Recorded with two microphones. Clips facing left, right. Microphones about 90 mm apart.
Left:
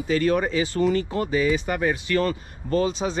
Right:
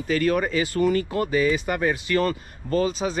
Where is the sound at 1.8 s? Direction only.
10° left (ahead or behind).